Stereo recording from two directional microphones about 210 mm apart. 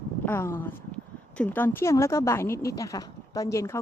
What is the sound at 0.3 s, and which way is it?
Speech, 10° left (ahead or behind).